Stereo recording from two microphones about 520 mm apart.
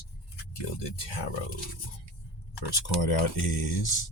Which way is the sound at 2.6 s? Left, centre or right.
Left.